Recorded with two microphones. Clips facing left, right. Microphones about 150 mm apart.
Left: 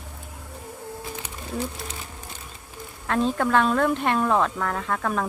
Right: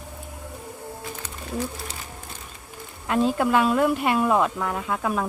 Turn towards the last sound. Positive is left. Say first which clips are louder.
# even
turn(degrees=-5)  # may be behind; listen again after turning